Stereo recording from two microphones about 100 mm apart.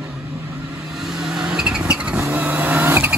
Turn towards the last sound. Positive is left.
turn(degrees=-15)  # may be behind; listen again after turning